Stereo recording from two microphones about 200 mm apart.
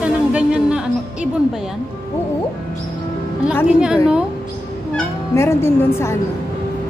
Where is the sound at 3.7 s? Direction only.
5° right (ahead or behind).